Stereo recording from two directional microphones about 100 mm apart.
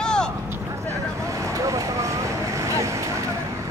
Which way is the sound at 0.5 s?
30° right (ahead or behind).